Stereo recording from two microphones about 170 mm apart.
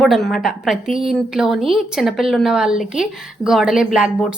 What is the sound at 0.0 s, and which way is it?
A woman's voice, centre (ahead or behind).